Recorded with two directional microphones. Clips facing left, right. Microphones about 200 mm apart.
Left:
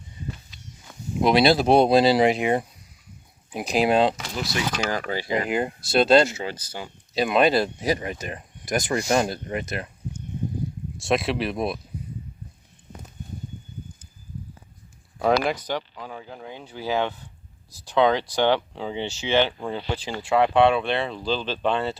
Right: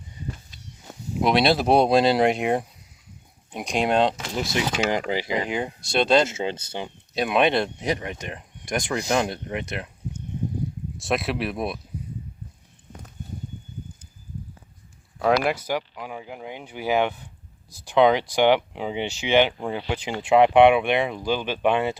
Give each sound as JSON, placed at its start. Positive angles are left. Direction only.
{"t": 1.2, "sound": "speech", "side_deg": 0}
{"t": 4.4, "sound": "speech", "side_deg": -20}
{"t": 5.5, "sound": "speech", "side_deg": 5}
{"t": 6.2, "sound": "speech", "side_deg": -25}
{"t": 7.1, "sound": "speech", "side_deg": 0}
{"t": 10.9, "sound": "speech", "side_deg": 0}
{"t": 15.2, "sound": "speech", "side_deg": -5}